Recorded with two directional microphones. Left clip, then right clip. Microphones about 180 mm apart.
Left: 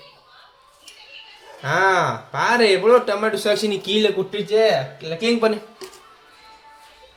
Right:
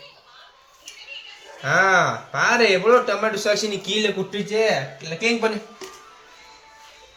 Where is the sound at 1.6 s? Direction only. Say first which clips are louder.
Even; 75° left (ahead or behind).